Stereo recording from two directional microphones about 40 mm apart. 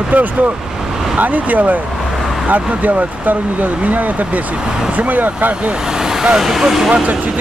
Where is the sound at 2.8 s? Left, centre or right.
Right.